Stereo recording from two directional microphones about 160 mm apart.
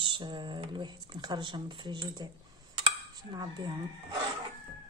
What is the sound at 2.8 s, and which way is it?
Dishes, 25° right (ahead or behind).